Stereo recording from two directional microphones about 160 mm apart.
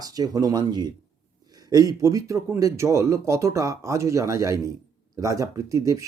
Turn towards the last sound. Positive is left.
turn(degrees=-20)  # may be behind; listen again after turning